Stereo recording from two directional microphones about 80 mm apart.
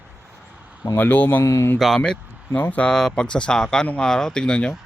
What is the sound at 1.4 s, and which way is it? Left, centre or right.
Speech, left.